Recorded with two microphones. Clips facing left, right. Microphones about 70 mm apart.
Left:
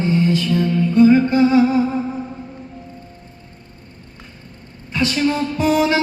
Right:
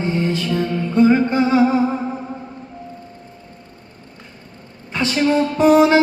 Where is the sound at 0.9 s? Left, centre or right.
Right.